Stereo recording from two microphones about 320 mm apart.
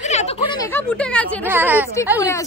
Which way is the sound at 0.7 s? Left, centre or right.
Centre.